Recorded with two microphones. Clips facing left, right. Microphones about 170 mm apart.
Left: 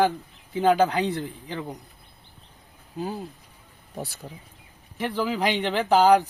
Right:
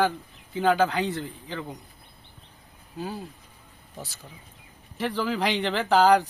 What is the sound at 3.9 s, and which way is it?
Speech, 60° left (ahead or behind).